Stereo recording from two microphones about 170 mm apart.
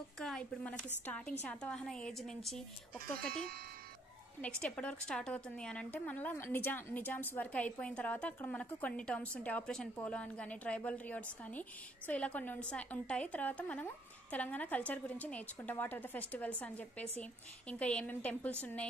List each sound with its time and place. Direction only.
0.2 s a woman's voice: 5° left (ahead or behind)
3.2 s speech: 60° right (ahead or behind)
4.4 s a woman's voice: 5° left (ahead or behind)